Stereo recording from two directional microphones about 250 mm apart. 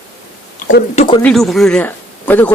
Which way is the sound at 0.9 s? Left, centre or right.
Left.